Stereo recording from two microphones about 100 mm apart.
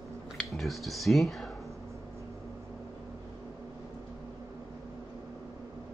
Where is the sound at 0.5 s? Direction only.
Centre (ahead or behind).